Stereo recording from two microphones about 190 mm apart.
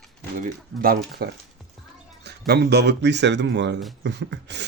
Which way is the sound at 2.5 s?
60° right (ahead or behind).